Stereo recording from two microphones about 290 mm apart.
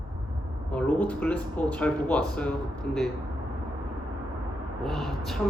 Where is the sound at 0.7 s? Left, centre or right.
Centre.